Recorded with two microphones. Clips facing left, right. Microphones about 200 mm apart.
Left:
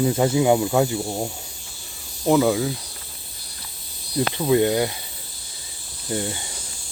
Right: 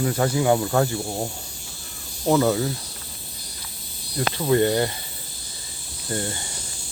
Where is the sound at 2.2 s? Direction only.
5° left (ahead or behind).